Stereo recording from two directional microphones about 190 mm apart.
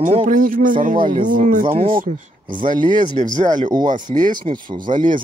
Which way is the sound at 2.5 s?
25° right (ahead or behind).